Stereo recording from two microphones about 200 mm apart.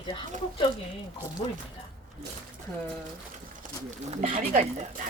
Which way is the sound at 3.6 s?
35° right (ahead or behind).